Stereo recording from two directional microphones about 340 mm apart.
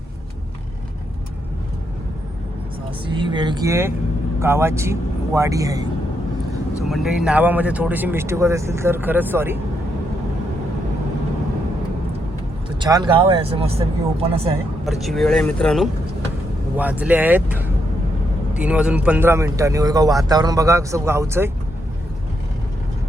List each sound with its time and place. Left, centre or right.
3.1 s speech: centre
12.8 s speech: centre
14.8 s speech: centre